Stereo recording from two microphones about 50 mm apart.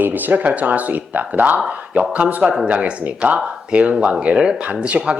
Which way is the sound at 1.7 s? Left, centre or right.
Right.